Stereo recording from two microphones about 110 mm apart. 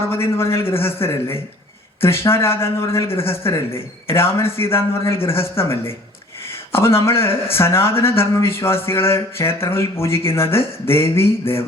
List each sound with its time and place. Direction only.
0.1 s a man's voice: 25° left (ahead or behind)